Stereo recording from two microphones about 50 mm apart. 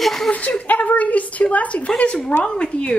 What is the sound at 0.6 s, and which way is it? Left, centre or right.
A woman's voice, left.